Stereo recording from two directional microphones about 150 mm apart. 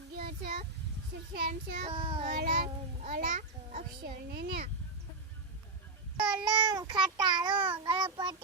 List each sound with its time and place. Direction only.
0.2 s a sound: 90° right
1.3 s a child's voice: 90° right
1.9 s a child's voice: 35° right (ahead or behind)
2.2 s a child's voice: 90° right
6.3 s a child's voice: 25° right (ahead or behind)